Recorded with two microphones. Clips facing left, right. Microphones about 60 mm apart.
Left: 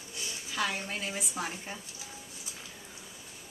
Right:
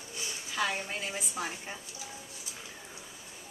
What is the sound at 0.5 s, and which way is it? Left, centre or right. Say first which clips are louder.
Speech: right 1 dB; centre.